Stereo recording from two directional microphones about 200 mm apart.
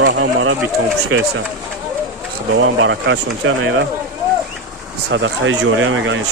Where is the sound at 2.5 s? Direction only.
70° right (ahead or behind).